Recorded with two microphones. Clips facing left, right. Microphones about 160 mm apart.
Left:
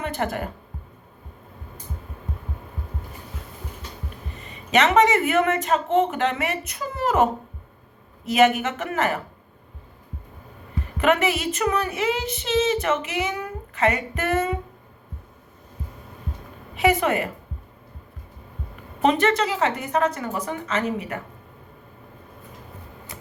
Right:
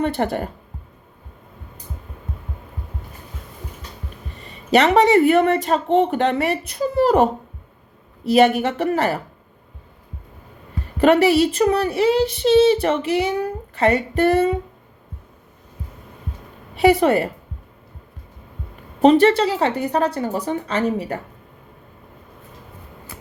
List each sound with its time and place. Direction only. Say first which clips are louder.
0.0 s speech: right 6 dB; 35° right (ahead or behind)
4.4 s speech: right 4 dB; 35° right (ahead or behind)
10.9 s speech: right 7 dB; 35° right (ahead or behind)
16.7 s speech: right 6 dB; 35° right (ahead or behind)
18.9 s speech: right 7 dB; 35° right (ahead or behind)